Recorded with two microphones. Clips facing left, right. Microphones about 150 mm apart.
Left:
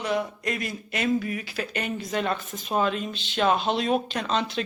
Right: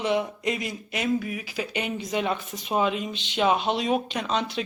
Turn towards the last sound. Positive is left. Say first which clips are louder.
# even
turn(degrees=-10)  # may be behind; listen again after turning